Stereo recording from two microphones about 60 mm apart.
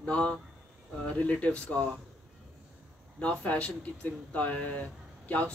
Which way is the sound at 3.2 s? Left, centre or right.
Left.